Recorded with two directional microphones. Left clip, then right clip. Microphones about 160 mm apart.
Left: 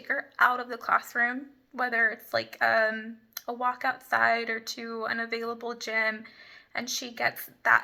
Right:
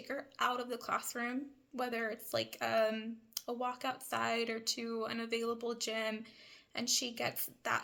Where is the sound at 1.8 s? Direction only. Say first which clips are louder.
Left 14 dB; 25° right (ahead or behind).